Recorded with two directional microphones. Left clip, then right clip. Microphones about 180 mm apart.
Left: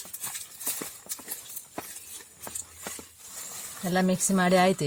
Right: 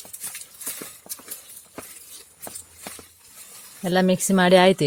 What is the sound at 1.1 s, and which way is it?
Clip-clop, 20° right (ahead or behind).